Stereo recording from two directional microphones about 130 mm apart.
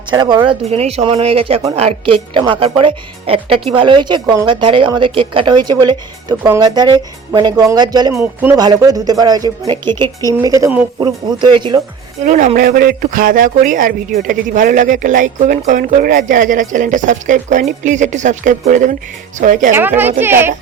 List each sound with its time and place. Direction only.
0.1 s speech: 35° right (ahead or behind)
0.7 s speech: 50° right (ahead or behind)
2.3 s speech: 40° right (ahead or behind)
8.2 s a woman's voice: 10° right (ahead or behind)
8.5 s speech: 30° right (ahead or behind)
10.4 s speech: 25° right (ahead or behind)
12.2 s speech: 80° right
12.5 s speech: 90° right
19.7 s a woman's voice: 15° right (ahead or behind)